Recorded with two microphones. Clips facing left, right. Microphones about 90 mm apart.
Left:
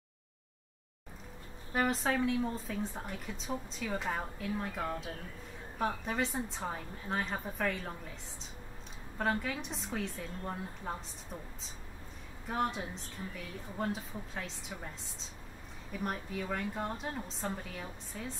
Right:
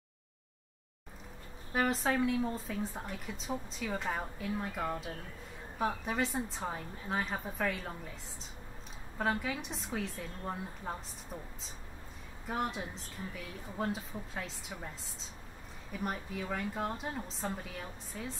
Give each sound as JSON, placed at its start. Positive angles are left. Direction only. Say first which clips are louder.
{"t": 1.7, "sound": "a woman's voice", "louder": "even", "side_deg": 0}
{"t": 9.2, "sound": "a woman's voice", "louder": "even", "side_deg": 0}
{"t": 12.4, "sound": "a woman's voice", "louder": "left 2 dB", "side_deg": 0}
{"t": 15.9, "sound": "a woman's voice", "louder": "even", "side_deg": 0}